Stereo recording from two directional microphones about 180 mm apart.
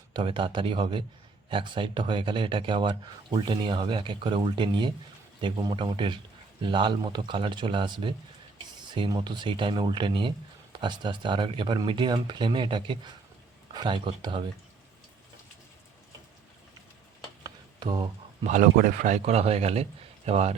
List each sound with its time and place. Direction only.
0.1 s speech: 30° right (ahead or behind)
17.4 s stir: 25° right (ahead or behind)
18.4 s a man's voice: 45° right (ahead or behind)